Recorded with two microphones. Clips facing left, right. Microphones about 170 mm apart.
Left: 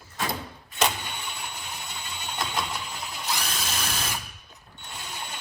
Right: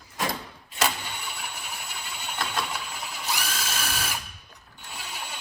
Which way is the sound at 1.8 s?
20° left (ahead or behind).